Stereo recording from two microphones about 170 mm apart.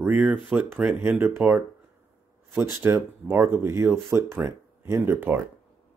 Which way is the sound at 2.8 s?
15° right (ahead or behind).